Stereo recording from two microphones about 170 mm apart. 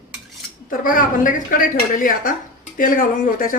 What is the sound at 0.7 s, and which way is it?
Speech, 55° left (ahead or behind).